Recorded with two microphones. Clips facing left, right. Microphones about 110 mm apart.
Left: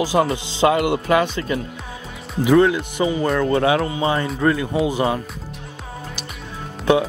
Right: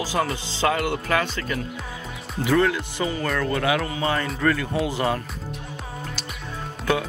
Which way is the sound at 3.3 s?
30° left (ahead or behind).